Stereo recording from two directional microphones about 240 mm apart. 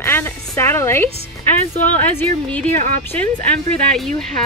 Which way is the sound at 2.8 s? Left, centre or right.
Right.